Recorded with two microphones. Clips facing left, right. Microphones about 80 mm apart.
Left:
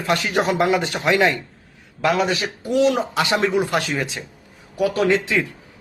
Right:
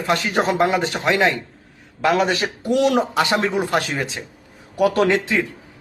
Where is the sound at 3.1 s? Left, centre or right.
Right.